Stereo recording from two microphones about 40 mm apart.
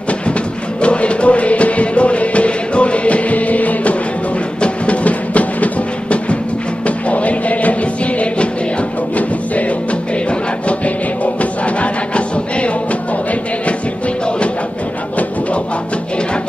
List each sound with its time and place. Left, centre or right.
0.7 s music: left